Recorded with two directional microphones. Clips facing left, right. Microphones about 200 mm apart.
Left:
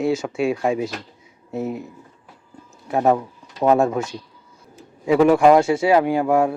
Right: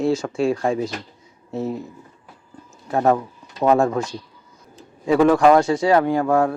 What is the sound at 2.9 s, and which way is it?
Speech, 10° left (ahead or behind).